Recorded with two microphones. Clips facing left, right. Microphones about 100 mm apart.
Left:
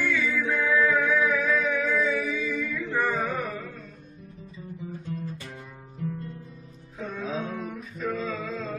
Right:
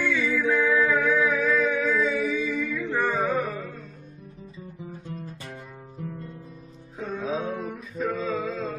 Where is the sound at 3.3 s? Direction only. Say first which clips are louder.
Right 4 dB; 35° right (ahead or behind).